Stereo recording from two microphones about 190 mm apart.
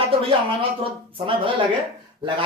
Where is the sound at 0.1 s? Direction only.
30° right (ahead or behind).